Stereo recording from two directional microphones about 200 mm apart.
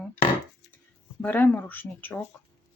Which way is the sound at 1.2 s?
10° left (ahead or behind).